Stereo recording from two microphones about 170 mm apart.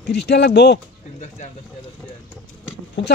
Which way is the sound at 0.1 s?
80° left.